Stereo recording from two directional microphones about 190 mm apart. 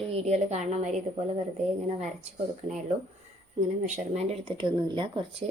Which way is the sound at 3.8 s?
40° right (ahead or behind).